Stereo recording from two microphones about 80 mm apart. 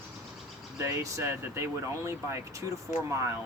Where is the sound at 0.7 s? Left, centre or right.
Right.